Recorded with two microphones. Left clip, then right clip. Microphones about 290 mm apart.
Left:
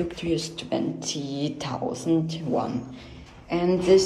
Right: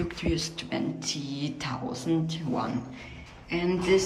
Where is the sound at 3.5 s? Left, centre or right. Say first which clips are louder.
Left 5 dB; centre.